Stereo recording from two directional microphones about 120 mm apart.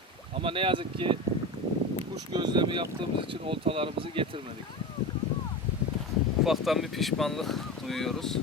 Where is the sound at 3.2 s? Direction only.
45° right (ahead or behind).